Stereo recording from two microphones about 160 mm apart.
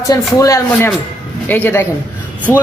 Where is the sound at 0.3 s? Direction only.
20° left (ahead or behind).